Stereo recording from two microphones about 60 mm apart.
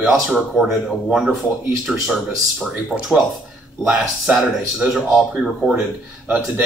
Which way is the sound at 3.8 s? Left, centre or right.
Centre.